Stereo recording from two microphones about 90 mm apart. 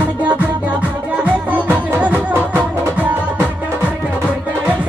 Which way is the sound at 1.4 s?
20° right (ahead or behind).